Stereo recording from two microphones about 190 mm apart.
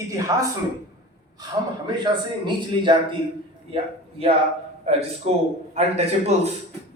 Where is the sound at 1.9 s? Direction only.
25° right (ahead or behind).